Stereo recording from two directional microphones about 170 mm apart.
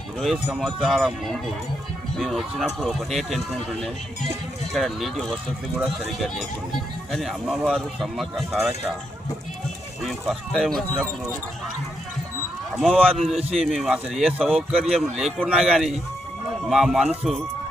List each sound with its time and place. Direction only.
0.4 s speech: 5° right (ahead or behind)
10.0 s speech: centre (ahead or behind)
12.7 s speech: 5° left (ahead or behind)
13.3 s a man's voice: 35° right (ahead or behind)
13.7 s speech: centre (ahead or behind)